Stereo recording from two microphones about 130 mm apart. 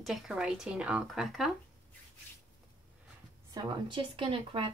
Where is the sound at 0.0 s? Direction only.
Centre (ahead or behind).